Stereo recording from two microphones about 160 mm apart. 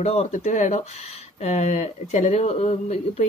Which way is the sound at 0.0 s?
40° left (ahead or behind).